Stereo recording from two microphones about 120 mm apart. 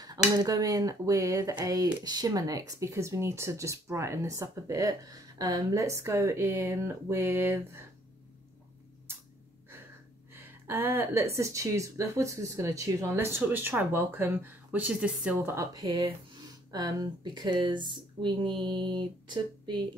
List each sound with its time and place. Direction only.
0.4 s speech: 30° right (ahead or behind)
10.3 s speech: 20° right (ahead or behind)
15.4 s speech: 25° right (ahead or behind)